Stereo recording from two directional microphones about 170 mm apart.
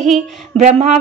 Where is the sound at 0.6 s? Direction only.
40° right (ahead or behind).